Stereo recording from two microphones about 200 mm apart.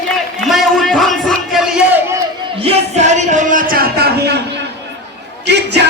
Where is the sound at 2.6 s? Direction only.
30° right (ahead or behind); by 4.4 s 50° right (ahead or behind).